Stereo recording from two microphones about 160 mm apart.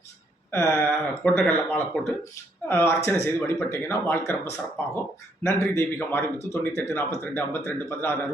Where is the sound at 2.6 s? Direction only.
15° left (ahead or behind).